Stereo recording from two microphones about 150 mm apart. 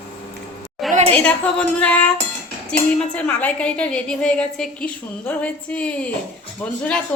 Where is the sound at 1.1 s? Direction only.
10° left (ahead or behind).